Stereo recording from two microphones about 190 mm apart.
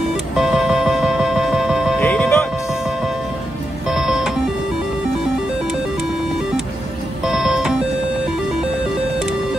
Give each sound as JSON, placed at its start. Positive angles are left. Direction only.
{"t": 0.4, "sound": "music", "side_deg": 0}
{"t": 2.0, "sound": "music", "side_deg": 10}
{"t": 3.8, "sound": "music", "side_deg": -5}
{"t": 7.2, "sound": "music", "side_deg": 0}